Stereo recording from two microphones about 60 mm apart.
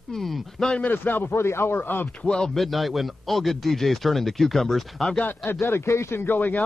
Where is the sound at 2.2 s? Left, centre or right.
Centre.